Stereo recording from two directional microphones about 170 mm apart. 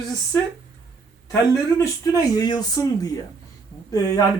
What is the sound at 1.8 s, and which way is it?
Speech, 20° left (ahead or behind).